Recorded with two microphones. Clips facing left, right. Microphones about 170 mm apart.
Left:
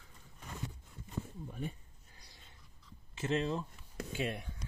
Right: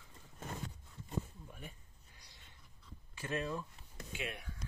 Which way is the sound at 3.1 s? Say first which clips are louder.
Left 5 dB; 25° left (ahead or behind).